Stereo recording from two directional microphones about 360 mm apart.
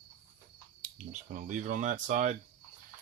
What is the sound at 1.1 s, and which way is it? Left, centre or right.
Speech, right.